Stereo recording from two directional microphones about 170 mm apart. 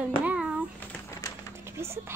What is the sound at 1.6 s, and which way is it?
Speech, 15° right (ahead or behind).